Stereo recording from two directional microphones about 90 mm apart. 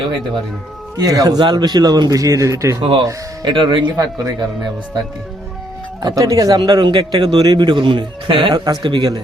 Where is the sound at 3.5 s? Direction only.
60° right (ahead or behind); by 4.3 s 45° right (ahead or behind).